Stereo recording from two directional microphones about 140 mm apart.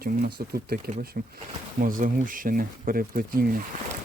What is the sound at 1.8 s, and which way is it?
Speech, 75° right (ahead or behind).